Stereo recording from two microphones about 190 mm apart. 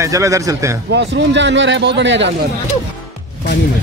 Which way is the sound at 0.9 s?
70° right (ahead or behind).